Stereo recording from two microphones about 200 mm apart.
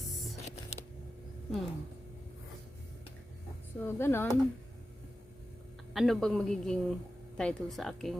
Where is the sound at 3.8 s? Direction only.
10° left (ahead or behind).